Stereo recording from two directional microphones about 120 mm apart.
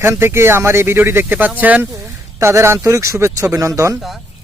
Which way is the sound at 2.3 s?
25° right (ahead or behind).